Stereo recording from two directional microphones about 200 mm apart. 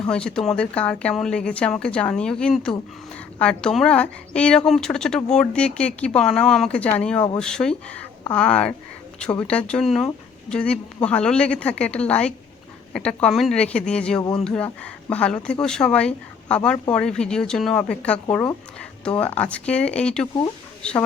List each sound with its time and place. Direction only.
0.1 s a woman's voice: 5° left (ahead or behind)